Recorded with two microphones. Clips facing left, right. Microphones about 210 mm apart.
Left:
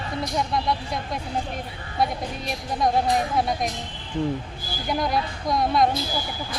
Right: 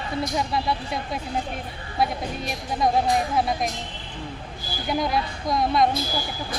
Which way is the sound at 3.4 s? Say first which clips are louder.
Even; centre (ahead or behind).